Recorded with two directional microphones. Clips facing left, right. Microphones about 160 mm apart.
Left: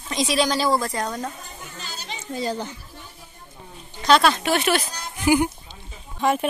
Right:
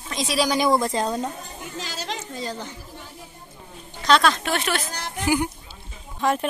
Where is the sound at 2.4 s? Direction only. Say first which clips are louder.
Left 9 dB; 10° left (ahead or behind).